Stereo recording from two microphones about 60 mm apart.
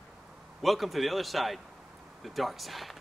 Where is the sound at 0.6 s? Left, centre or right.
Centre.